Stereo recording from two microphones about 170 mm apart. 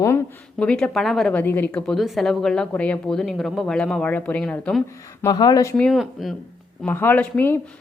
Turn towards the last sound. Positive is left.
turn(degrees=10)  # may be behind; listen again after turning